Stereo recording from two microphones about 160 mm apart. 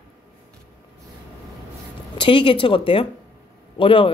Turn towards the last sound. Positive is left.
turn(degrees=35)  # may be behind; listen again after turning